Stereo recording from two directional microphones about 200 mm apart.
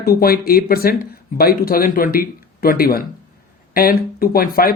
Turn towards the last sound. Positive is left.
turn(degrees=45)  # may be behind; listen again after turning